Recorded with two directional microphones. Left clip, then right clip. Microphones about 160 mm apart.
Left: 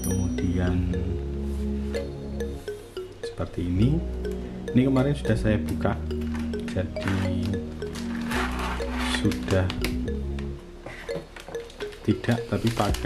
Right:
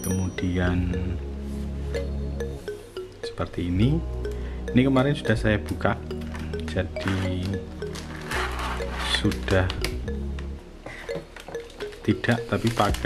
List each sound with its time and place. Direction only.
0.0 s speech: 5° right (ahead or behind)
1.9 s music: 30° left (ahead or behind)
3.3 s speech: 5° right (ahead or behind)
6.3 s music: 5° right (ahead or behind)
11.8 s music: 5° right (ahead or behind)
12.4 s speech: centre (ahead or behind)